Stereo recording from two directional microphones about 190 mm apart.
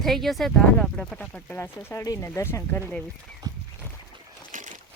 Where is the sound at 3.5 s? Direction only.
20° right (ahead or behind).